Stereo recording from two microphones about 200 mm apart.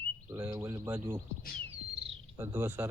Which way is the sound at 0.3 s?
10° right (ahead or behind).